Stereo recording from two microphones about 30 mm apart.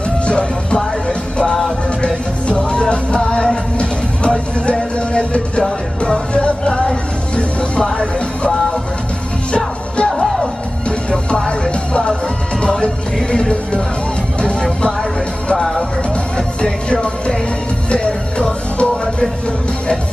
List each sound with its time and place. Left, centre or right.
0.3 s music: left
4.6 s music: left
10.0 s music: centre
11.1 s music: left
14.4 s music: left
15.5 s music: centre
16.9 s music: left